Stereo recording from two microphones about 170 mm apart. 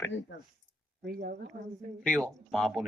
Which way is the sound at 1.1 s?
65° right (ahead or behind).